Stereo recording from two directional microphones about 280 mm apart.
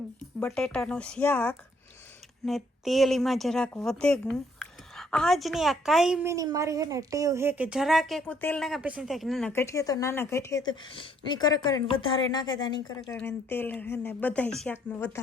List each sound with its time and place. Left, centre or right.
0.3 s a woman's voice: centre